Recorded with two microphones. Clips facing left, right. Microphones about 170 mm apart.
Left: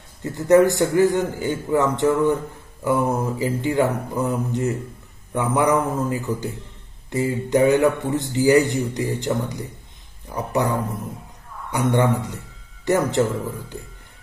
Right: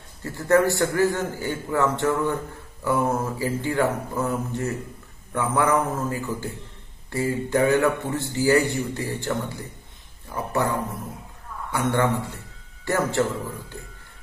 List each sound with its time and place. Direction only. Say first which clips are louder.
0.2 s a man's voice: left 5 dB; 20° left (ahead or behind)
11.7 s a man's voice: left 3 dB; 15° left (ahead or behind)